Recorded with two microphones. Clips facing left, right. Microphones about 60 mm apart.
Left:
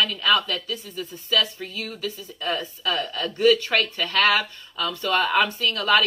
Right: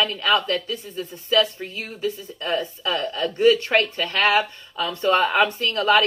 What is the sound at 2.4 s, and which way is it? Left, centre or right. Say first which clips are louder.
Speech: right 2 dB; centre.